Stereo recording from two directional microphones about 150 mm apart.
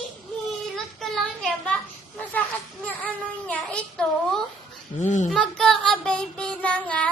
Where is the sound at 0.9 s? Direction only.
Centre (ahead or behind).